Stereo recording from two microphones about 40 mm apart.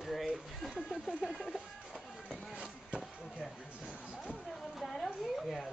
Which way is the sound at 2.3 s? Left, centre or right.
Right.